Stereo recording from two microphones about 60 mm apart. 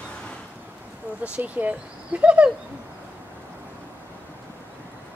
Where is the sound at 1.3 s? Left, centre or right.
Right.